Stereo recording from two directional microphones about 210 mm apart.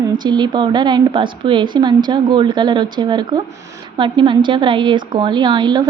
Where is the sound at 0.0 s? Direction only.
20° right (ahead or behind).